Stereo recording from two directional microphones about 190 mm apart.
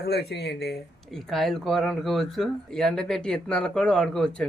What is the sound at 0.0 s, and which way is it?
Speech, 60° left (ahead or behind).